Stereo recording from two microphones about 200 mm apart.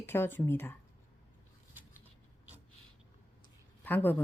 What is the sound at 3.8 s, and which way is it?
Speech, 10° left (ahead or behind).